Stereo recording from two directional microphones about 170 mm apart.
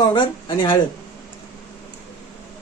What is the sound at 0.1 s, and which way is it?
Speech, 25° left (ahead or behind).